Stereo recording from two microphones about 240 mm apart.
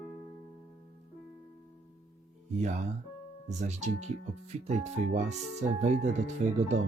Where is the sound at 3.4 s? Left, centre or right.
Right.